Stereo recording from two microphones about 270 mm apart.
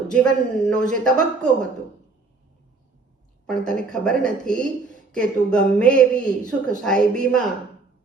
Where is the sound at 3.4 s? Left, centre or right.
Centre.